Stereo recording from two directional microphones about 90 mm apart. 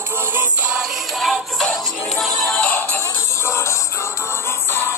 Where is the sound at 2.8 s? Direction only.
25° left (ahead or behind).